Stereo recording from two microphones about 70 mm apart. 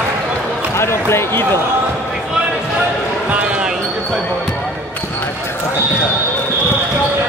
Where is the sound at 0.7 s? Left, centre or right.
Left.